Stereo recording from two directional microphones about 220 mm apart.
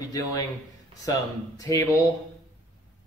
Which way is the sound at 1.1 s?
15° left (ahead or behind).